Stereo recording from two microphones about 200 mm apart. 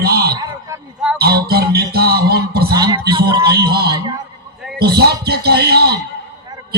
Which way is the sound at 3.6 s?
50° right (ahead or behind).